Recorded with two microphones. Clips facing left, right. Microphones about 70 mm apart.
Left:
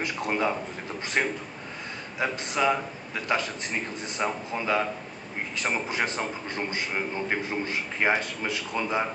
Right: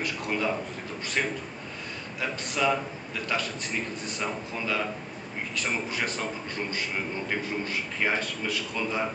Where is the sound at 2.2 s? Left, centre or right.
Left.